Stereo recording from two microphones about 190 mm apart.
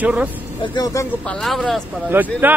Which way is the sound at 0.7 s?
20° left (ahead or behind).